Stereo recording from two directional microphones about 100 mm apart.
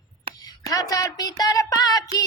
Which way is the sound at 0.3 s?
65° right (ahead or behind).